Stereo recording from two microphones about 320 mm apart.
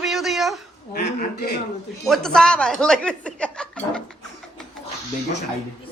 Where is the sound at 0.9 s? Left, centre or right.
Left.